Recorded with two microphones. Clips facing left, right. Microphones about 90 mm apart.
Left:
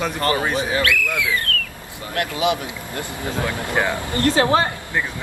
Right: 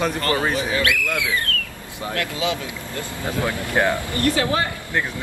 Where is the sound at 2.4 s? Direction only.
20° left (ahead or behind).